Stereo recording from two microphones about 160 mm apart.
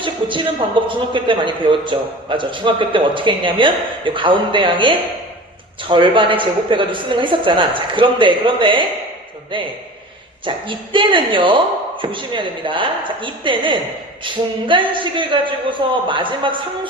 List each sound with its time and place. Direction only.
0.0 s music: 30° right (ahead or behind)
0.9 s a woman's voice: 30° right (ahead or behind)
10.4 s a woman's voice: 30° right (ahead or behind)